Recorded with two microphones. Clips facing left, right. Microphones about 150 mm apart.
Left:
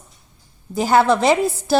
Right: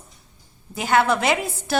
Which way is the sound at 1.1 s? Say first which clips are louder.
Left 6 dB; 30° left (ahead or behind).